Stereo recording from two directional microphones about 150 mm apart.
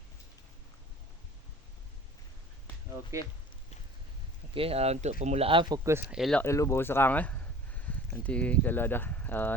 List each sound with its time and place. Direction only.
3.1 s speech: 20° right (ahead or behind)
4.5 s speech: 40° right (ahead or behind); by 6.0 s 25° right (ahead or behind)
6.1 s speech: centre (ahead or behind)
6.4 s speech: 20° left (ahead or behind)